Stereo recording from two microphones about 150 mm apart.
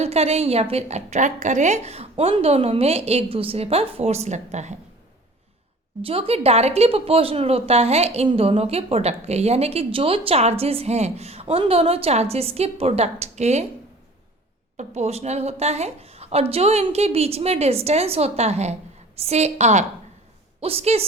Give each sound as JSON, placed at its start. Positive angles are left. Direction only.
{"t": 0.0, "sound": "a woman's voice", "side_deg": -45}
{"t": 6.0, "sound": "a woman's voice", "side_deg": -40}
{"t": 14.8, "sound": "a woman's voice", "side_deg": -50}